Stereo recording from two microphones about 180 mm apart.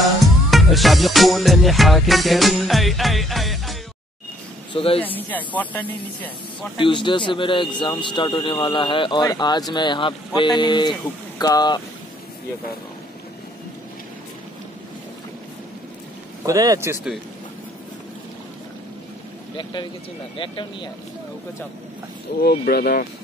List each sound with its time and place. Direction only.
0.0 s music: centre (ahead or behind)
4.7 s speech: 30° left (ahead or behind)
5.0 s speech: 10° left (ahead or behind)
6.8 s speech: 25° left (ahead or behind)
16.4 s speech: 15° right (ahead or behind)
19.5 s speech: 25° left (ahead or behind)
22.4 s speech: 60° left (ahead or behind)